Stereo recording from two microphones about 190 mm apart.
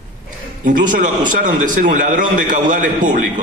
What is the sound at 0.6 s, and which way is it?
A man's voice, 45° right (ahead or behind).